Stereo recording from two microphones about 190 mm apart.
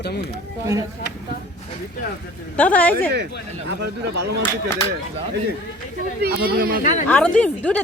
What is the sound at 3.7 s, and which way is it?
Speech, 65° right (ahead or behind).